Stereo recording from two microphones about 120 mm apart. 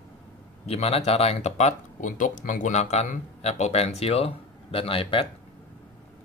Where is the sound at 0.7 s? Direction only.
60° left (ahead or behind).